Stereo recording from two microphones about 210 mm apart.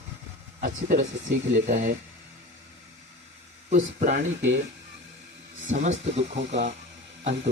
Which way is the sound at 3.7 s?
35° right (ahead or behind).